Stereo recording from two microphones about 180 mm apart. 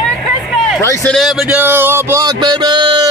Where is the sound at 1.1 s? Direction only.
Centre (ahead or behind).